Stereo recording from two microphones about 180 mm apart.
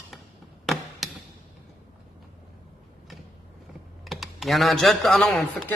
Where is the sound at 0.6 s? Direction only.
Centre (ahead or behind).